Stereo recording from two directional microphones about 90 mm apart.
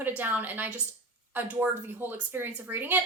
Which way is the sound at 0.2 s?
20° right (ahead or behind).